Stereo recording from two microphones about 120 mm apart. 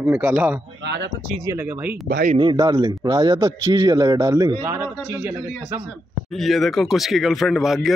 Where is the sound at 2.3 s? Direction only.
35° right (ahead or behind).